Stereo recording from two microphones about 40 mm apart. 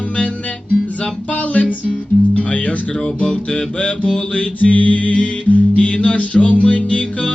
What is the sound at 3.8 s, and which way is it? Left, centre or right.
Music, left.